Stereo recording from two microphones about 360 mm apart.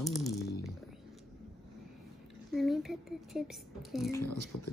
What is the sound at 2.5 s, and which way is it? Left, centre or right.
Speech, centre.